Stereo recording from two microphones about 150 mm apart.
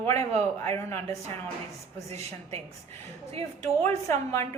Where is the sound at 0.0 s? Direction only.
15° left (ahead or behind).